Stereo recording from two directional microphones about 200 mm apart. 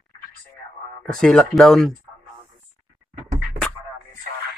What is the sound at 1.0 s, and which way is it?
Speech, 5° left (ahead or behind).